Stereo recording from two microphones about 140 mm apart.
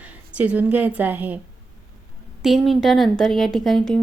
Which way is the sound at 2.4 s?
Centre (ahead or behind).